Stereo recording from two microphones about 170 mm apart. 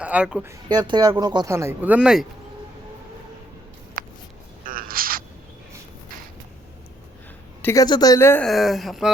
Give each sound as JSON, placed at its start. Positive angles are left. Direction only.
{"t": 0.0, "sound": "speech", "side_deg": -5}
{"t": 0.4, "sound": "speech", "side_deg": -25}
{"t": 4.0, "sound": "a sound", "side_deg": -55}
{"t": 7.6, "sound": "speech", "side_deg": 20}
{"t": 8.4, "sound": "speech", "side_deg": 0}